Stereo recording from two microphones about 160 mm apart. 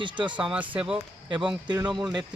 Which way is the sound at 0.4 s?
10° right (ahead or behind).